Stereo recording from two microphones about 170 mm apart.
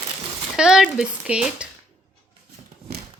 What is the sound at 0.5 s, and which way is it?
Speech, 5° right (ahead or behind).